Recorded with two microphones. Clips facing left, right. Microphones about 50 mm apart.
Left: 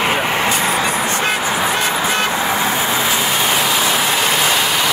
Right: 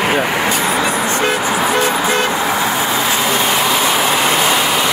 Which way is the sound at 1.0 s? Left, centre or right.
Right.